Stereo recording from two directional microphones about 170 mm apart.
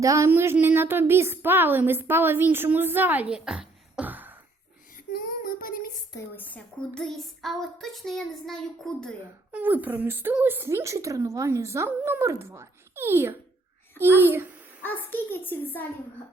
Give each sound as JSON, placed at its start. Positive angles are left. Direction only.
{"t": 0.0, "sound": "a woman's voice", "side_deg": -20}
{"t": 5.1, "sound": "child singing", "side_deg": 60}
{"t": 6.1, "sound": "a sound", "side_deg": 10}
{"t": 9.5, "sound": "a woman's voice", "side_deg": -10}
{"t": 14.8, "sound": "a child's voice", "side_deg": 10}